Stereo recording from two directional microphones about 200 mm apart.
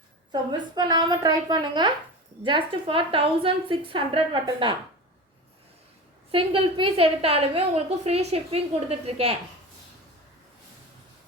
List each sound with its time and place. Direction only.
0.8 s a woman's voice: 20° right (ahead or behind)
6.3 s a woman's voice: 25° right (ahead or behind)